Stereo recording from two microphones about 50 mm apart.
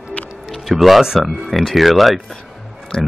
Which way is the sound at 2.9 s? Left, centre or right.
Centre.